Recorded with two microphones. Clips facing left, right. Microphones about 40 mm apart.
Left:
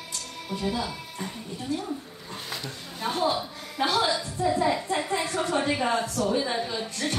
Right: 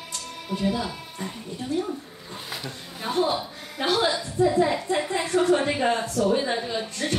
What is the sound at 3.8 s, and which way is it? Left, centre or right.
Speech, right.